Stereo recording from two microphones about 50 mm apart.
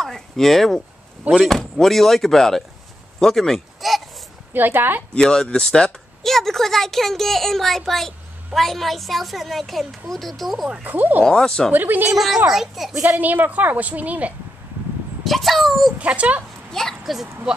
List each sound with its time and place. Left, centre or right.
0.0 s a woman's voice: centre
4.6 s speech: right
5.1 s a woman's voice: centre
10.8 s a woman's voice: right
11.2 s speech: centre
11.7 s a woman's voice: right
12.1 s a woman's voice: centre
13.2 s a woman's voice: right
15.2 s a woman's voice: centre
16.0 s speech: right
17.0 s speech: centre